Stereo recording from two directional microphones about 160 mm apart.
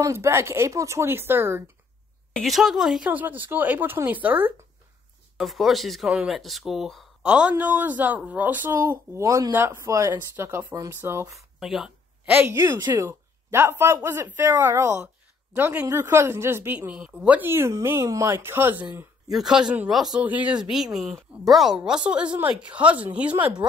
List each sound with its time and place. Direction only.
0.0 s speech: 20° right (ahead or behind)
2.3 s speech: centre (ahead or behind)
5.4 s speech: centre (ahead or behind); by 11.3 s 15° right (ahead or behind)
11.3 s a sound: centre (ahead or behind)
12.5 s speech: 25° right (ahead or behind); by 23.6 s 10° right (ahead or behind)